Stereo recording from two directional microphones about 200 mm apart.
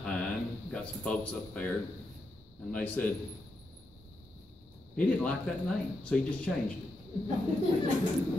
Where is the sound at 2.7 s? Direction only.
5° left (ahead or behind).